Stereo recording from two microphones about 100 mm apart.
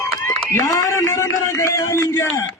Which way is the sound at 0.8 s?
30° left (ahead or behind).